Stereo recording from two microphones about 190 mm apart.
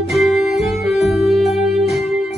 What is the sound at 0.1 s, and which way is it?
Music, centre (ahead or behind).